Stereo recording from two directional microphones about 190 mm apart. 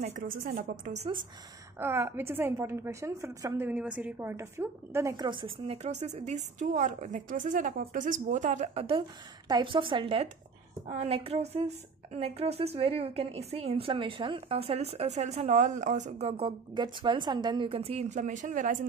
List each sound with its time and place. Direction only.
0.0 s a woman's voice: 40° right (ahead or behind)
1.8 s a woman's voice: 10° right (ahead or behind)
5.8 s a woman's voice: 35° right (ahead or behind)